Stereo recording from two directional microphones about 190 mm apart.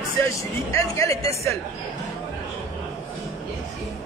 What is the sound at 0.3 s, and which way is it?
Speech, 15° left (ahead or behind).